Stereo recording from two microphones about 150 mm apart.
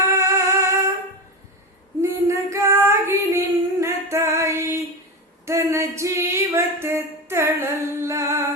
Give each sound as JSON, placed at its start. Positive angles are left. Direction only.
{"t": 0.1, "sound": "music", "side_deg": -20}
{"t": 2.0, "sound": "female singing", "side_deg": -20}
{"t": 5.5, "sound": "a sound", "side_deg": -20}